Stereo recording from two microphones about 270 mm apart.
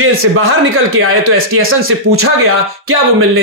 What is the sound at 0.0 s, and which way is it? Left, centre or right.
A man's voice, right.